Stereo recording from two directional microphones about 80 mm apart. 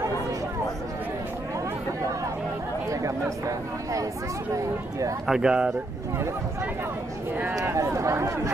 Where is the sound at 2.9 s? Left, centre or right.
Right.